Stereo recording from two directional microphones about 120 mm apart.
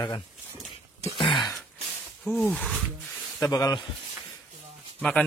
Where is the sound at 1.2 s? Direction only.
40° left (ahead or behind).